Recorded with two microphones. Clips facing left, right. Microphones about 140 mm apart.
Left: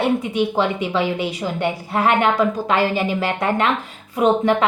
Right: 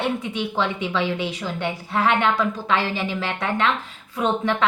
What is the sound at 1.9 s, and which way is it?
Speech, 50° left (ahead or behind).